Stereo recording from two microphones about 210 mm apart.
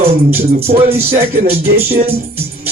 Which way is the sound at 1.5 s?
45° right (ahead or behind).